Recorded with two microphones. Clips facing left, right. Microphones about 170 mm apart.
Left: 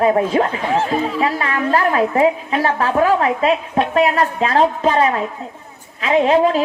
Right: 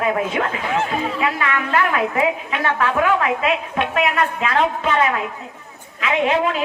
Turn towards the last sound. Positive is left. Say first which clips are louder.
# left 5 dB
turn(degrees=35)  # may be behind; listen again after turning